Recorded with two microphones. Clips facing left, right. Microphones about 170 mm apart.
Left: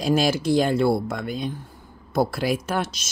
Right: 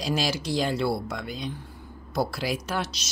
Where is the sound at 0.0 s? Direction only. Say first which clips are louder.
Left 7 dB; 50° left (ahead or behind).